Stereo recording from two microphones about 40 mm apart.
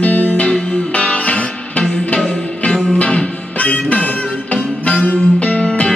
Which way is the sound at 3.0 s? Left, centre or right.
Left.